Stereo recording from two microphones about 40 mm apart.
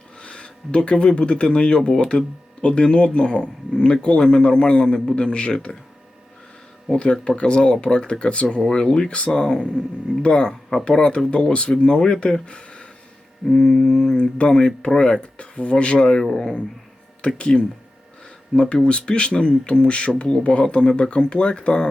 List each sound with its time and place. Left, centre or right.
0.2 s speech: left
6.9 s speech: left
8.7 s mantra: centre
9.0 s speech: left
9.4 s speech: centre
12.5 s a sound: left
13.5 s mantra: centre
14.2 s speech: left
16.2 s mantra: centre
17.2 s speech: left